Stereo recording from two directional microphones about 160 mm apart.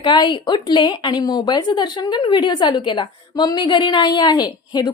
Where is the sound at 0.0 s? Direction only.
30° left (ahead or behind).